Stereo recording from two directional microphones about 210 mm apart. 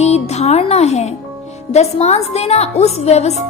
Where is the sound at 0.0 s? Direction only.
30° left (ahead or behind).